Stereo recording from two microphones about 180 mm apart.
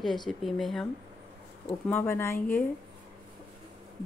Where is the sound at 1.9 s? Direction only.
10° left (ahead or behind).